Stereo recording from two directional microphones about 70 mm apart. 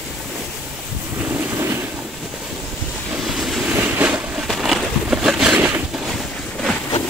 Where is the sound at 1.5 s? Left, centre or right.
Right.